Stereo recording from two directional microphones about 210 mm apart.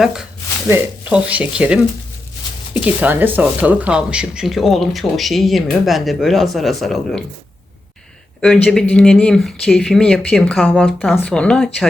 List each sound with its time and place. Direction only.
0.0 s speech: 5° right (ahead or behind)
8.6 s speech: 5° left (ahead or behind)